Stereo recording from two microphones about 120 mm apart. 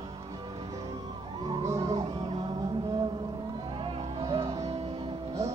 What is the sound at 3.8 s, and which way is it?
Music, 45° right (ahead or behind).